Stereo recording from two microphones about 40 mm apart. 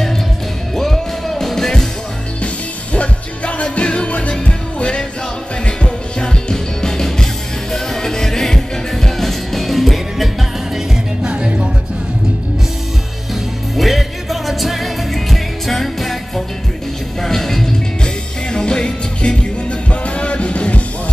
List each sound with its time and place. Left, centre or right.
0.7 s music: centre
2.4 s music: left; by 10.3 s centre
11.2 s music: right
13.7 s music: centre
18.0 s music: centre